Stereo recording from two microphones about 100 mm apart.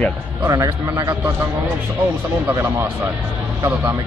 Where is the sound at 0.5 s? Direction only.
35° right (ahead or behind).